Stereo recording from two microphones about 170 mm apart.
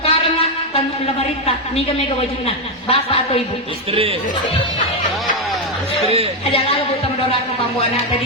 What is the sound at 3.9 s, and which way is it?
Speech, 35° right (ahead or behind).